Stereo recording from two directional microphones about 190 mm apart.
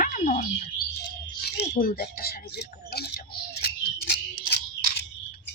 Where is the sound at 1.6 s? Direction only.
45° left (ahead or behind).